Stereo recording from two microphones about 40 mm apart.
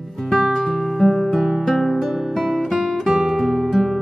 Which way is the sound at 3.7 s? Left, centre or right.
Centre.